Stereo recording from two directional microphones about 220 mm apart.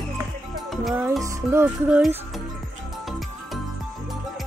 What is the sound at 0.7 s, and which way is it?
Music, centre (ahead or behind).